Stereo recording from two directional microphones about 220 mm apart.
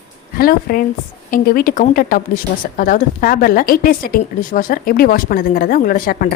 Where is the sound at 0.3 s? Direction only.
40° left (ahead or behind).